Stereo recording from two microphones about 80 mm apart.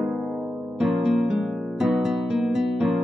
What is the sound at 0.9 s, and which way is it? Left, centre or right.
Music, centre.